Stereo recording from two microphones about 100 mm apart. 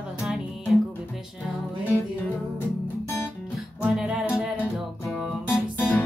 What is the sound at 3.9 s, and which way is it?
Music, 10° right (ahead or behind).